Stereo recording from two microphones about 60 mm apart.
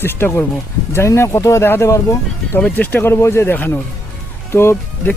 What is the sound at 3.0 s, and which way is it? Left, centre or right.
Speech, left.